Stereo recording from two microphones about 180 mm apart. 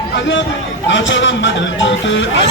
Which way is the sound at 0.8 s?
90° left.